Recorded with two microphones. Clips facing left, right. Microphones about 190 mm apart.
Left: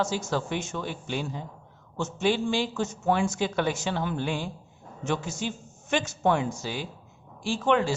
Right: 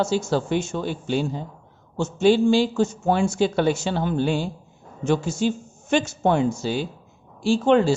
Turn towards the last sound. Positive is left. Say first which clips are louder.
# right 7 dB
turn(degrees=-30)  # may be behind; listen again after turning